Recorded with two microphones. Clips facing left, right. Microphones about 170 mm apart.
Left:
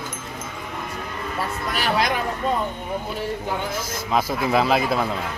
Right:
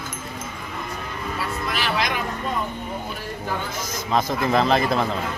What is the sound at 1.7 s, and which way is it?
Music, 40° left (ahead or behind).